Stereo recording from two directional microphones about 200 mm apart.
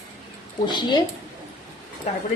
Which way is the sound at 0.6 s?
20° left (ahead or behind).